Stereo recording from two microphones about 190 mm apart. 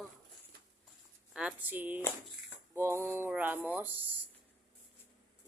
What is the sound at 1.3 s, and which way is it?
Speech, 5° right (ahead or behind).